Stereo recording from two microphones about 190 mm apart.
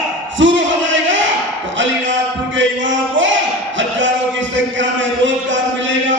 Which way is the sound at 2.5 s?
80° right.